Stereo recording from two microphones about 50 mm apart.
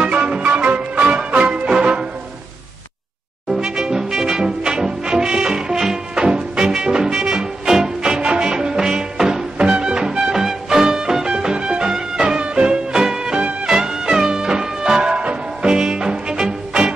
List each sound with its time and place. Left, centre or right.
0.0 s music: right
3.4 s brass instrument: centre
13.7 s music: centre